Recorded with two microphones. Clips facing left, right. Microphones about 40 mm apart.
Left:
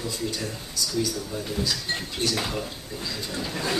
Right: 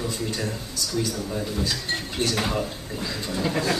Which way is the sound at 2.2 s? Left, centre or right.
Right.